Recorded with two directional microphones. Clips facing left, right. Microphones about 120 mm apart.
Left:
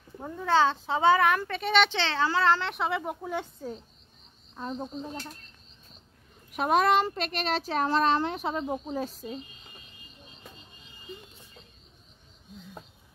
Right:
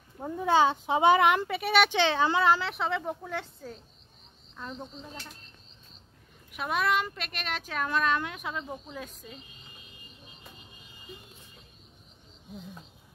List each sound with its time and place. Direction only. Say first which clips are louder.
0.2 s speech: even; 15° right (ahead or behind)
2.7 s speech: left 1 dB; 5° left (ahead or behind)
4.6 s speech: left 6 dB; 35° left (ahead or behind)
6.5 s speech: left 5 dB; 40° left (ahead or behind)